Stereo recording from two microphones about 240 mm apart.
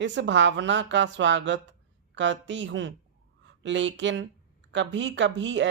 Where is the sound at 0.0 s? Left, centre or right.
Right.